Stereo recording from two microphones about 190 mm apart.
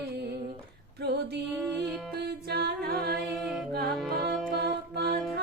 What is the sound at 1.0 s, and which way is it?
Music, 60° right (ahead or behind).